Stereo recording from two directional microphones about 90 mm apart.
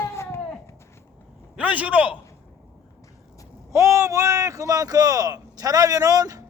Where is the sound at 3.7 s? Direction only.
35° right (ahead or behind).